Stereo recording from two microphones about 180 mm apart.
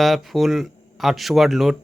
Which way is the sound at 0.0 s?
Centre (ahead or behind).